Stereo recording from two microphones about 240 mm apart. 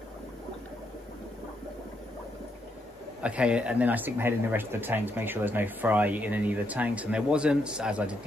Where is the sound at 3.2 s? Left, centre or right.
Centre.